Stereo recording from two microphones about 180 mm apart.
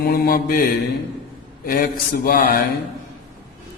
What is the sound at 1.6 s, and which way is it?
Mantra, 55° left (ahead or behind).